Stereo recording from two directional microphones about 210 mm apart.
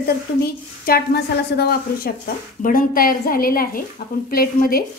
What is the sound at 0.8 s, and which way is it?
A woman's voice, 50° left (ahead or behind).